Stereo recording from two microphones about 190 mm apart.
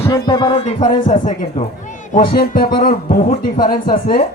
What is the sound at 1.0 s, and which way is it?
Speech, 40° left (ahead or behind).